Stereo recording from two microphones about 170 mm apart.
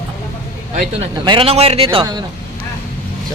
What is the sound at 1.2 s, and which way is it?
Speech, 30° right (ahead or behind).